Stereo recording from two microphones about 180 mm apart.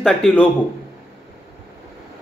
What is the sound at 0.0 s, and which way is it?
Speech, 5° left (ahead or behind).